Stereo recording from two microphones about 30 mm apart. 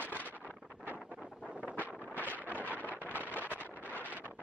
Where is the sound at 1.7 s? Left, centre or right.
Left.